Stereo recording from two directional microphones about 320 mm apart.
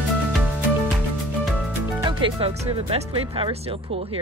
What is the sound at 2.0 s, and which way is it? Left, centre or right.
Speech, centre.